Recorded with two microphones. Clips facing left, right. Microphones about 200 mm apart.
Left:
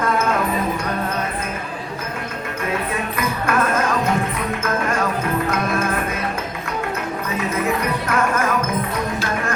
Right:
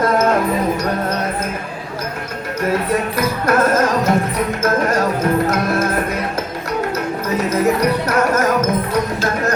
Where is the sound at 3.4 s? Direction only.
40° right (ahead or behind).